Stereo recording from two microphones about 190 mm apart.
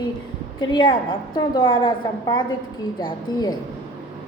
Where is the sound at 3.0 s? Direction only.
25° left (ahead or behind).